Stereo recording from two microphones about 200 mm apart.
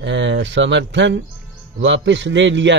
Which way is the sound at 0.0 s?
65° right (ahead or behind).